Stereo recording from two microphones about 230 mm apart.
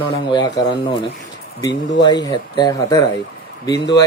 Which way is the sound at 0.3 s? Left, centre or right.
Centre.